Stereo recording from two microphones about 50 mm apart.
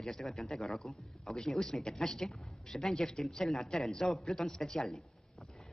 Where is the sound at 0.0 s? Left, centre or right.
Centre.